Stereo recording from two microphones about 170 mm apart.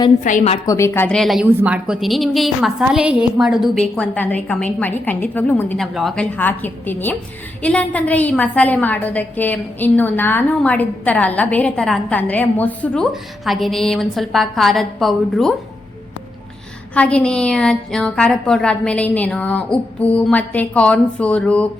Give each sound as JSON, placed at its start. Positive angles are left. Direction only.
{"t": 0.2, "sound": "a woman's voice", "side_deg": 50}
{"t": 0.6, "sound": "a woman's voice", "side_deg": 20}
{"t": 16.9, "sound": "a woman's voice", "side_deg": 5}